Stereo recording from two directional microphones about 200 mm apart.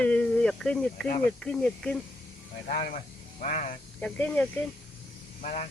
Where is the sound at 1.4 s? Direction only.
5° left (ahead or behind).